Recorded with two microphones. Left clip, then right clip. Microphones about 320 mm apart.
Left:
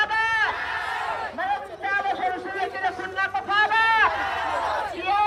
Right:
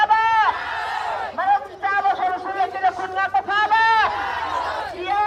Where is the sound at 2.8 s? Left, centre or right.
Right.